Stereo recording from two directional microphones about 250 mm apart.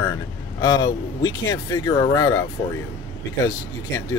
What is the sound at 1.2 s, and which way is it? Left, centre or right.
Speech, centre.